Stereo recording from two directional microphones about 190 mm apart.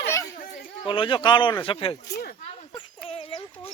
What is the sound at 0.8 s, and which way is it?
Speech, 25° left (ahead or behind).